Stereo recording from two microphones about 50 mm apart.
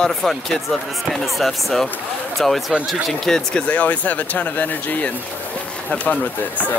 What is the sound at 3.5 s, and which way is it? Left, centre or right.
Speech, left.